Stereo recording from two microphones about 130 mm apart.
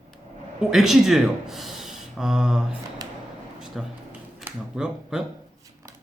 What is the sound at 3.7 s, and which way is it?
Speech, 5° right (ahead or behind).